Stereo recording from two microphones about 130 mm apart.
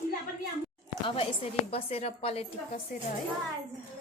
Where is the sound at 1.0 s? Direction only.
45° left (ahead or behind).